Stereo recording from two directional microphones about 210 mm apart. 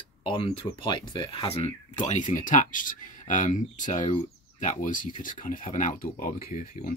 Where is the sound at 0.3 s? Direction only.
25° left (ahead or behind).